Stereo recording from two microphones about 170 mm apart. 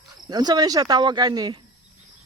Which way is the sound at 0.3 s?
25° right (ahead or behind).